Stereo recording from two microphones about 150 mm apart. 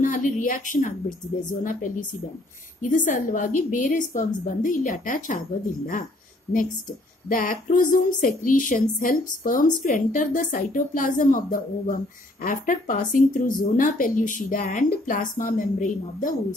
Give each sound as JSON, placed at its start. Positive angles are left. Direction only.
{"t": 0.0, "sound": "speech", "side_deg": 60}
{"t": 7.2, "sound": "speech", "side_deg": 65}